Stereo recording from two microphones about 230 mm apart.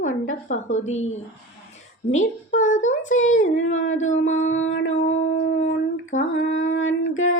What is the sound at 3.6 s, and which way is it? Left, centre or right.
Speech, left.